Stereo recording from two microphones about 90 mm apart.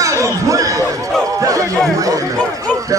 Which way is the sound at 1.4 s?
40° right (ahead or behind).